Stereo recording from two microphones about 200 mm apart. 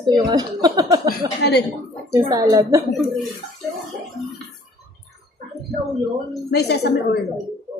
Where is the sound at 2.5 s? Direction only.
15° right (ahead or behind).